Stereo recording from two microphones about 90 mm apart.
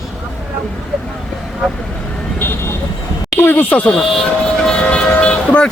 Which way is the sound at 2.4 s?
25° left (ahead or behind).